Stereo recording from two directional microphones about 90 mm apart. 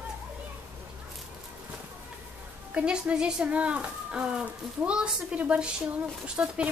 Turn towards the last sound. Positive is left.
turn(degrees=-15)  # may be behind; listen again after turning